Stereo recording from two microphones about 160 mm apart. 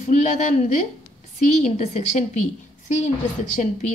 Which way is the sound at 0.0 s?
50° left (ahead or behind).